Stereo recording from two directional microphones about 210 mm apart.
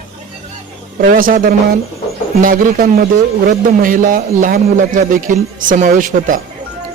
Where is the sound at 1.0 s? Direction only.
40° right (ahead or behind).